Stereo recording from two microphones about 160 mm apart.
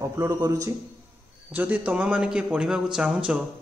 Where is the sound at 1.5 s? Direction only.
10° right (ahead or behind).